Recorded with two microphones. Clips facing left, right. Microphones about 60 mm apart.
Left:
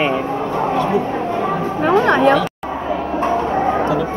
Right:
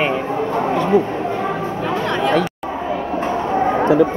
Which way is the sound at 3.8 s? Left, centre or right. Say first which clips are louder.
Right 4 dB; right.